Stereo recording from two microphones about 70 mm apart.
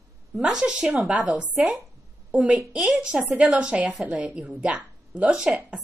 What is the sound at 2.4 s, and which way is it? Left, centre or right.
Speech, centre.